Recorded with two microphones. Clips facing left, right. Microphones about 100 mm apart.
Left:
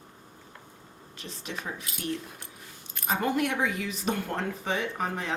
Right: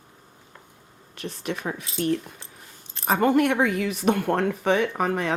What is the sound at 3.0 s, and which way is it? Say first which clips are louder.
Speech: right 7 dB; 55° right (ahead or behind).